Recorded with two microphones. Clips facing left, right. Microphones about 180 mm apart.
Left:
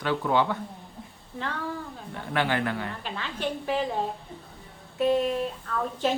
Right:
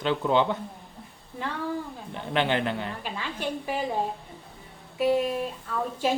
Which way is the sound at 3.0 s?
10° right (ahead or behind).